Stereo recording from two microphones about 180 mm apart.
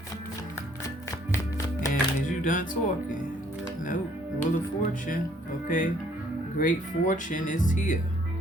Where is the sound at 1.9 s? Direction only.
45° left (ahead or behind).